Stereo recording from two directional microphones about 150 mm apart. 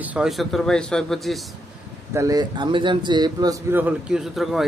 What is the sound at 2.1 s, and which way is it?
Speech, 25° right (ahead or behind).